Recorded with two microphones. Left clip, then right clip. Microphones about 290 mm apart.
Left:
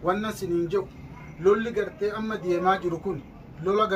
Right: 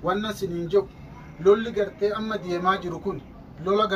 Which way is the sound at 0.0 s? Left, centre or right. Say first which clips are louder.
Right 1 dB; centre.